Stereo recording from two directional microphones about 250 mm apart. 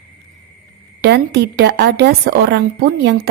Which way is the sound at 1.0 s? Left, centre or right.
Right.